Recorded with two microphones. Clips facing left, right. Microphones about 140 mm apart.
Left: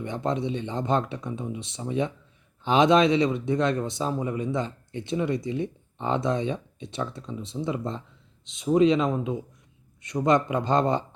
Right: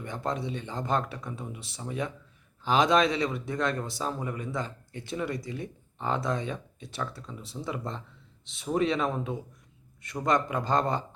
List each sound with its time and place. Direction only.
0.0 s speech: 20° left (ahead or behind)